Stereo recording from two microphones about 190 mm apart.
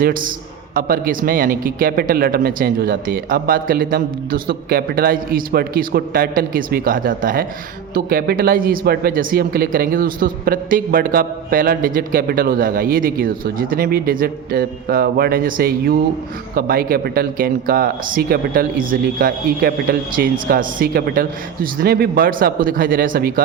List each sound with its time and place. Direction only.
0.0 s speech: 45° right (ahead or behind)